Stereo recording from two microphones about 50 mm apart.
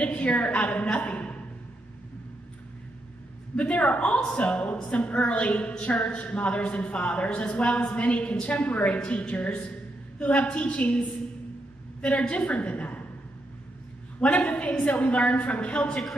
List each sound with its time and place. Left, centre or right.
0.0 s a woman's voice: left
3.5 s a woman's voice: left
14.2 s a woman's voice: left